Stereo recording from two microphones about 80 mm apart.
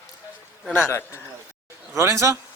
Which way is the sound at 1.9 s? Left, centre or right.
Right.